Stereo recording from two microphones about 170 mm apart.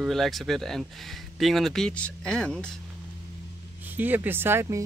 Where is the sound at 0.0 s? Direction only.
Centre (ahead or behind).